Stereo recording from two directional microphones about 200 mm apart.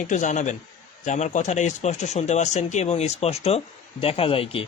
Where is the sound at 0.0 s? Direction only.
40° left (ahead or behind).